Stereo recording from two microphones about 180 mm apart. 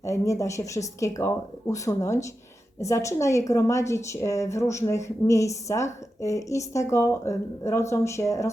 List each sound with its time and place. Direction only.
0.0 s a woman's voice: 15° left (ahead or behind)